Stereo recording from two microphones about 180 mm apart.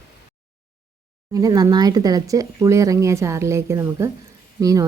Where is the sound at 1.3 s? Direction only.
20° right (ahead or behind).